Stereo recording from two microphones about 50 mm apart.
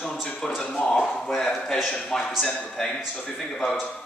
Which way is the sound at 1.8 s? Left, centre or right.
Centre.